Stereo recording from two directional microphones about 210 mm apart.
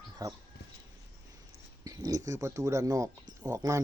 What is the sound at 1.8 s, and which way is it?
Speech, 15° right (ahead or behind).